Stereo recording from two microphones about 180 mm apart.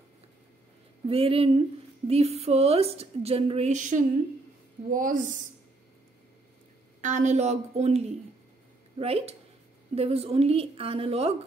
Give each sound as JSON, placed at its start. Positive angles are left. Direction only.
{"t": 1.0, "sound": "a woman's voice", "side_deg": -30}
{"t": 7.0, "sound": "a woman's voice", "side_deg": -40}